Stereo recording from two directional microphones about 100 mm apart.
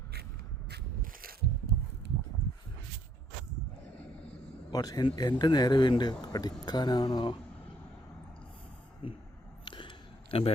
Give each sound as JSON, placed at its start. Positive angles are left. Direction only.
{"t": 4.7, "sound": "a man's voice", "side_deg": 40}
{"t": 9.6, "sound": "a sound", "side_deg": 55}
{"t": 10.3, "sound": "a man's voice", "side_deg": 75}